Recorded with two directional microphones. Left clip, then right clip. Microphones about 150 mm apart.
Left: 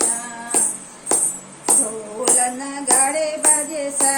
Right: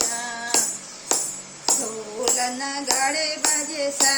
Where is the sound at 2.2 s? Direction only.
10° right (ahead or behind).